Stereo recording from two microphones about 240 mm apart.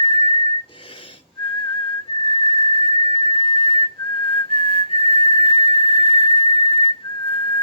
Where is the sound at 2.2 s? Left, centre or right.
Left.